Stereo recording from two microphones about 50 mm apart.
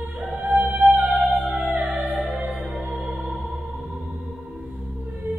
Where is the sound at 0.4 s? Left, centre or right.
Right.